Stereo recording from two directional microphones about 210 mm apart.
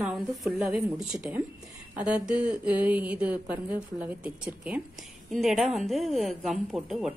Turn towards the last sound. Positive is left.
turn(degrees=0)  # may be behind; listen again after turning